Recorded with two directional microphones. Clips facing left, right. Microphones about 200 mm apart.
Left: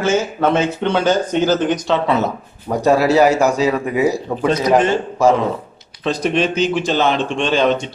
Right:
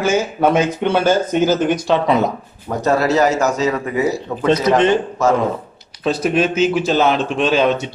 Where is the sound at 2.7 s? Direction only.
10° left (ahead or behind).